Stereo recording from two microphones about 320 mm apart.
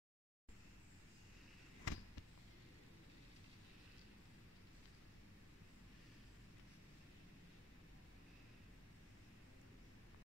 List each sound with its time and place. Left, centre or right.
1.9 s basketball bounce: left